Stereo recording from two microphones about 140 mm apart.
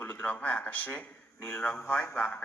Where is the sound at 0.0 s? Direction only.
15° left (ahead or behind).